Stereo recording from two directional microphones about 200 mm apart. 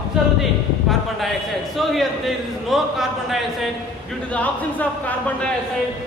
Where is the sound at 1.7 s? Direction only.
Centre (ahead or behind).